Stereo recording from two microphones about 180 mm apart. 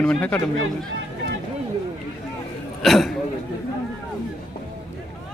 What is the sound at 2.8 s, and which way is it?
Speech, centre (ahead or behind).